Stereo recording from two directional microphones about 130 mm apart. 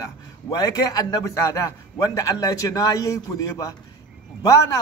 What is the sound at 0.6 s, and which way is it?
A man's voice, 30° left (ahead or behind).